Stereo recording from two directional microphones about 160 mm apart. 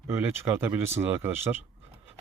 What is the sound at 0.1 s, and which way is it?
Speech, 15° right (ahead or behind).